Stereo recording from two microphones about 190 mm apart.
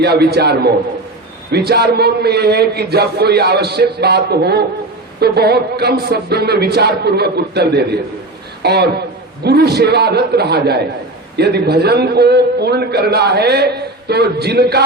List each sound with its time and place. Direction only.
0.0 s a man's voice: 60° right (ahead or behind)